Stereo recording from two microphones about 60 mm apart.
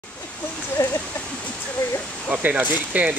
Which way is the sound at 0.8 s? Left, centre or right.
Left.